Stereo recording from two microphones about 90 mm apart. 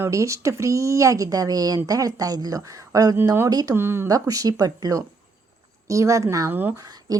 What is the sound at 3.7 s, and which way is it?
Speech, 25° right (ahead or behind).